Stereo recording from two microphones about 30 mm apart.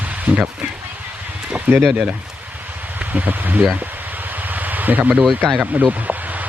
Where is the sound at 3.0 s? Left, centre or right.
Right.